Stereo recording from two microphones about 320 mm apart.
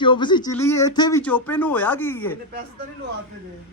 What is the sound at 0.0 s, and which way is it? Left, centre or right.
Speech, centre.